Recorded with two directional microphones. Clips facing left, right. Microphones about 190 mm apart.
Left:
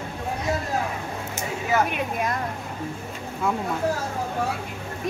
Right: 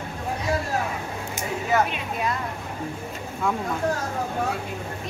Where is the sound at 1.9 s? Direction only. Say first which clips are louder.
Left 1 dB; 50° left (ahead or behind).